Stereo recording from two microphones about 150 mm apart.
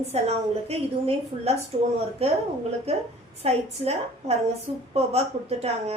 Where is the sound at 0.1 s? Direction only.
40° right (ahead or behind).